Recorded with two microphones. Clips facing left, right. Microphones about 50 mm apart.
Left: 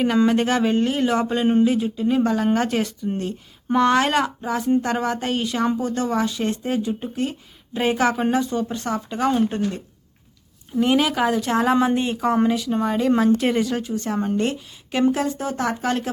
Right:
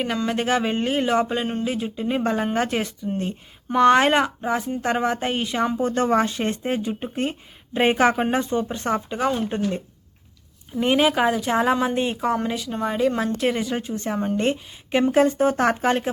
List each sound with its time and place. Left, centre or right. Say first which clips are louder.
0.3 s a woman's voice: left 3 dB; centre
2.0 s speech: left 3 dB; centre
2.5 s a woman's voice: left 2 dB; centre
3.9 s speech: right 1 dB; right
5.8 s speech: right 2 dB; right
9.1 s a woman's voice: left 3 dB; centre
10.8 s a woman's voice: even; centre
13.7 s speech: left 1 dB; centre
15.1 s speech: right 6 dB; right